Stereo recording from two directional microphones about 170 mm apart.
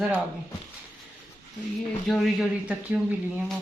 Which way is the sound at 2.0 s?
Centre (ahead or behind).